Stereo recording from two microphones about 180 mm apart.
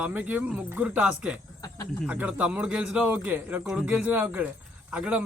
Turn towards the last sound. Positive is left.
turn(degrees=-5)  # may be behind; listen again after turning